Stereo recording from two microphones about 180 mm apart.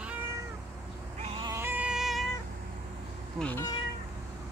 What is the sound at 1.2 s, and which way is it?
Cat, 30° right (ahead or behind).